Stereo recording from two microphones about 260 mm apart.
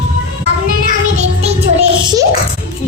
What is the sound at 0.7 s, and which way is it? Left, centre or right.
Music, right.